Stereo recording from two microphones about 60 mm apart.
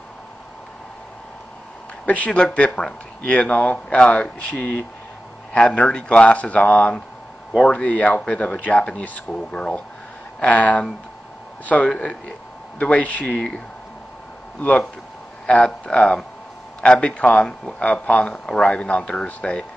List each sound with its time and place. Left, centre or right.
2.0 s speech: left
14.6 s speech: left